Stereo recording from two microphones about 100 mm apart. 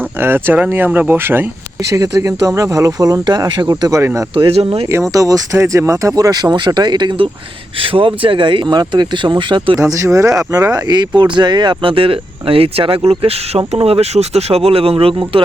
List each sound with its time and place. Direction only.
0.2 s speech: 20° right (ahead or behind)
1.8 s speech: 35° right (ahead or behind)
4.4 s speech: 65° right (ahead or behind)
5.1 s speech: 35° right (ahead or behind); by 7.3 s 50° right (ahead or behind)
7.8 s speech: 65° right (ahead or behind)
9.8 s speech: 30° right (ahead or behind); by 15.4 s 65° right (ahead or behind)